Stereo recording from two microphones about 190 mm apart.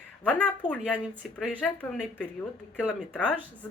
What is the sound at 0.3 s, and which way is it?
Speech, 5° left (ahead or behind).